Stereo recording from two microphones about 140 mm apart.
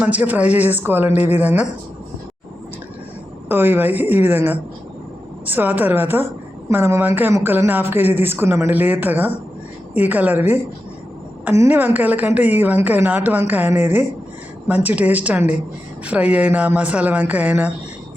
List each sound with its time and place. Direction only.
0.0 s speech: 10° right (ahead or behind)
1.1 s a woman's voice: 50° left (ahead or behind)
1.4 s speech: 10° right (ahead or behind)
3.5 s speech: 15° right (ahead or behind)
11.5 s speech: 15° right (ahead or behind)